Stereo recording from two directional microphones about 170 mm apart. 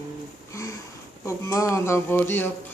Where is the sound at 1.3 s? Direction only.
20° left (ahead or behind).